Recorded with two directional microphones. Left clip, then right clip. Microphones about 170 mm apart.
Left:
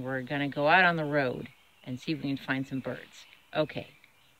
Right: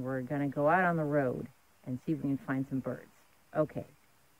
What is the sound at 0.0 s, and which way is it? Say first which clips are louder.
Speech: left 3 dB; 15° left (ahead or behind).